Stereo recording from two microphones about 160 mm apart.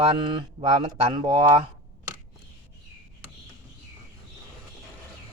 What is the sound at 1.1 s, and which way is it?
Speech, 30° right (ahead or behind).